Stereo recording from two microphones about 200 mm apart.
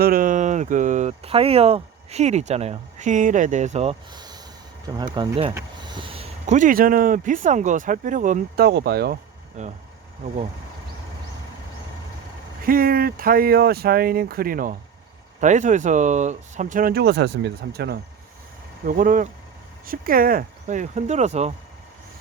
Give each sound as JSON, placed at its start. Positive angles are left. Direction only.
{"t": 0.0, "sound": "speech", "side_deg": -45}
{"t": 9.6, "sound": "speech", "side_deg": -35}
{"t": 12.6, "sound": "speech", "side_deg": -45}
{"t": 18.9, "sound": "speech", "side_deg": -40}